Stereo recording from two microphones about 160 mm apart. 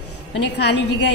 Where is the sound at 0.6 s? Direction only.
90° left.